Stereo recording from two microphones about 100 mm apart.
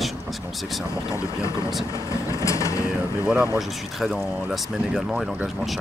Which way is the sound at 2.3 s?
30° left (ahead or behind).